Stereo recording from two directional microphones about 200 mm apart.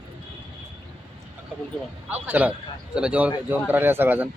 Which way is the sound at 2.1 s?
10° right (ahead or behind).